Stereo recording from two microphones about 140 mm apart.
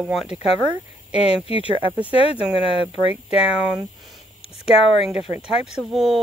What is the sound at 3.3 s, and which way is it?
Speech, 5° right (ahead or behind).